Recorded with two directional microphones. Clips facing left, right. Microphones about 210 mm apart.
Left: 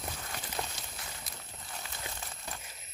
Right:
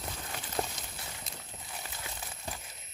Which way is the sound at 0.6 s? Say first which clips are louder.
Right 5 dB; 25° right (ahead or behind).